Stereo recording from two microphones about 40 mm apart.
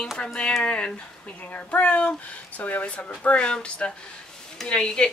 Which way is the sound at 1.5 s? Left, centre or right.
Left.